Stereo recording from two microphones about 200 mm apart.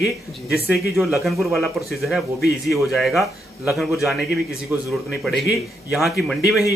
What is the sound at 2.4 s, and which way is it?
Speech, 55° left (ahead or behind).